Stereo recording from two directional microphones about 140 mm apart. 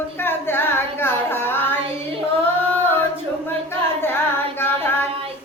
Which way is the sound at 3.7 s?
15° left (ahead or behind).